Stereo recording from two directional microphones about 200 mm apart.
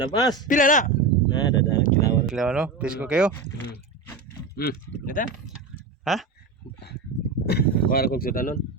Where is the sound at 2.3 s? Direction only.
Centre (ahead or behind).